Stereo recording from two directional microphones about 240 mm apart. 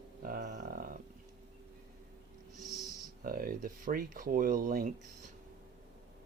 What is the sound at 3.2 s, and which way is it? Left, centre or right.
Speech, right.